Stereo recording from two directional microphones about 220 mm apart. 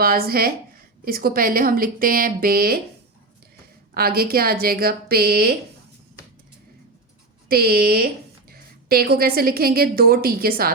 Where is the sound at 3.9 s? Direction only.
45° right (ahead or behind).